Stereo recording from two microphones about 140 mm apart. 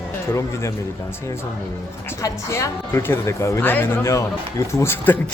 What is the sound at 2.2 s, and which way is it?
A woman's voice, 20° left (ahead or behind).